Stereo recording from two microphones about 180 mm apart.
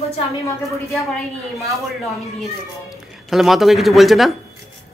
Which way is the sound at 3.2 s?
Centre (ahead or behind).